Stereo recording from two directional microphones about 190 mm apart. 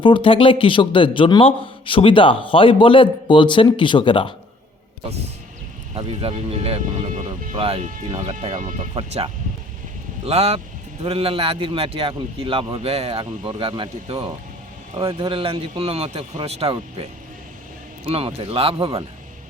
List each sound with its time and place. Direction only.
0.0 s speech: 25° left (ahead or behind)
5.9 s a man's voice: 30° right (ahead or behind)